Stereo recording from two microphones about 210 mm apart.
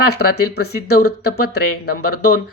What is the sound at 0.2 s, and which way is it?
Speech, 50° left (ahead or behind).